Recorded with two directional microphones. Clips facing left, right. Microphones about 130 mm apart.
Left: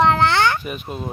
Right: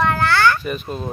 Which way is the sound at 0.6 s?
10° left (ahead or behind).